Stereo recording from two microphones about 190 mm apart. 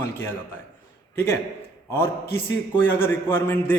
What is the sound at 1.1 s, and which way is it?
Speech, 10° left (ahead or behind).